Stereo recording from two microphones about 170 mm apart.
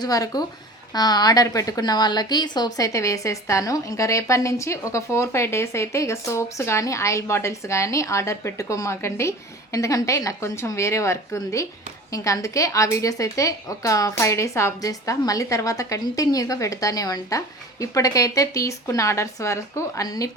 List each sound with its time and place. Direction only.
0.0 s a woman's voice: 20° left (ahead or behind)